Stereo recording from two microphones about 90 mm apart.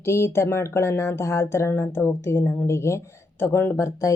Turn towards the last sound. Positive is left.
turn(degrees=35)  # may be behind; listen again after turning